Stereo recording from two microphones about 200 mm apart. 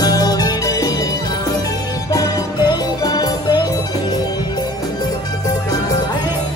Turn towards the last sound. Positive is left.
turn(degrees=20)  # may be behind; listen again after turning